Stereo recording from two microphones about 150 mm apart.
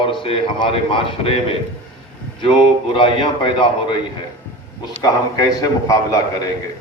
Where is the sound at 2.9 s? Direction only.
35° left (ahead or behind).